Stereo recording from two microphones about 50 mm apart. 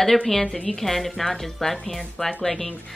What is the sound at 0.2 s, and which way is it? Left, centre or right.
A woman's voice, centre.